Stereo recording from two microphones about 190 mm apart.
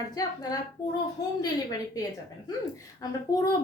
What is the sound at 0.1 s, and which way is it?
Speech, 20° left (ahead or behind).